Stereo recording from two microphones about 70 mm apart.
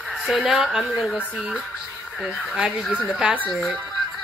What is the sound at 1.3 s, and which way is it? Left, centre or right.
Speech, centre.